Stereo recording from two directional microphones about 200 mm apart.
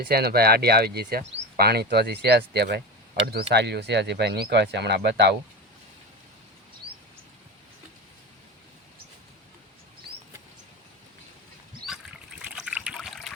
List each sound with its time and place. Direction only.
0.0 s speech: 50° right (ahead or behind)
12.4 s trickle: 5° right (ahead or behind)